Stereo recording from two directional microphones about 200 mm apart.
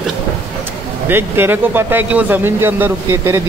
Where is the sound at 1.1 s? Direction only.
10° right (ahead or behind).